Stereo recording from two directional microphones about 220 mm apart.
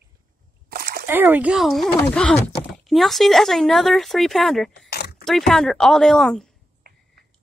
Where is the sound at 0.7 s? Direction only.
45° right (ahead or behind).